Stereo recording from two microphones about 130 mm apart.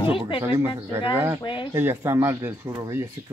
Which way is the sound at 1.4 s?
40° left (ahead or behind).